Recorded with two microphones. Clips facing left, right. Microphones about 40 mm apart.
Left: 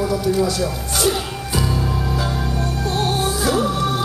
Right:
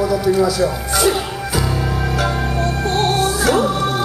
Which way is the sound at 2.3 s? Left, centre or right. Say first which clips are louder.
Right 4 dB; right.